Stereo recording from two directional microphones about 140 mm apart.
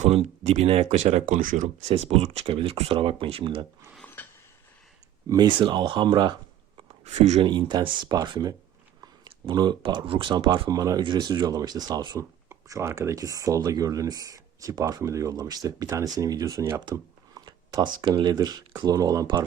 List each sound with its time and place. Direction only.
0.1 s speech: 45° right (ahead or behind)
1.3 s speech: 75° right (ahead or behind)
2.0 s speech: 45° right (ahead or behind)
3.9 s a sound: 10° left (ahead or behind)
5.3 s speech: 30° right (ahead or behind)
6.7 s a sound: 50° right (ahead or behind)
7.4 s speech: 35° right (ahead or behind)